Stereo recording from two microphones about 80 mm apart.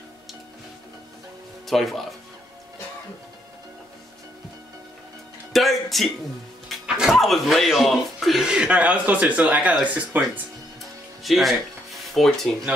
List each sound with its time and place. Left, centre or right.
1.7 s speech: centre
5.5 s music: centre
6.7 s speech: centre
8.5 s speech: centre
11.2 s music: centre